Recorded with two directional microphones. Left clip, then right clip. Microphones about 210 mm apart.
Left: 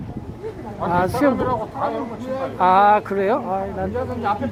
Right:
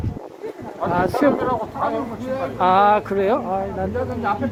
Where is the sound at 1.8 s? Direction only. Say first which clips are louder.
Right 2 dB; 55° left (ahead or behind).